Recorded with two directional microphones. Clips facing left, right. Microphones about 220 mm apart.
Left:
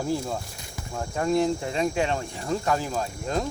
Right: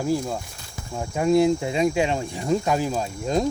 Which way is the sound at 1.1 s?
10° right (ahead or behind).